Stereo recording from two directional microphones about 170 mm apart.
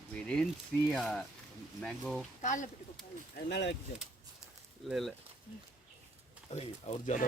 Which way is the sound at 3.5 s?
90° left.